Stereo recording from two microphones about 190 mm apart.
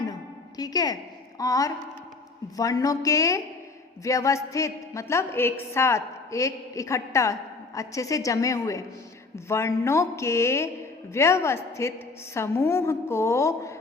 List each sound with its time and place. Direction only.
0.0 s music: 20° left (ahead or behind)
1.4 s a woman's voice: 20° left (ahead or behind)